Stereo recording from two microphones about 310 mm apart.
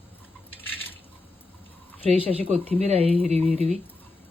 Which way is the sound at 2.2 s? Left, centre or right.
Centre.